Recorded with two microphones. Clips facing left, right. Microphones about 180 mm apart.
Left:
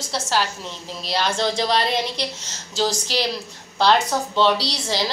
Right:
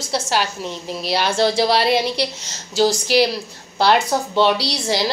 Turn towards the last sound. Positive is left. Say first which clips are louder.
# right 3 dB
turn(degrees=-10)  # may be behind; listen again after turning